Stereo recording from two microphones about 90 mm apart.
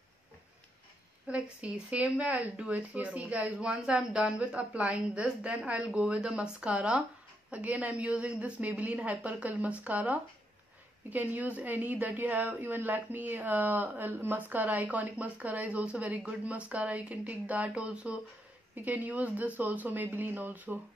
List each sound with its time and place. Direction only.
1.2 s speech: 15° right (ahead or behind)